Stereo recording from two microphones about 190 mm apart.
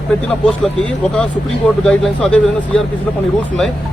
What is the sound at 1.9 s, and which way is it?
Speech, 5° left (ahead or behind).